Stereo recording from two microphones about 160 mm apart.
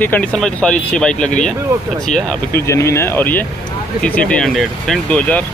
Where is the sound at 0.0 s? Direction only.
10° left (ahead or behind).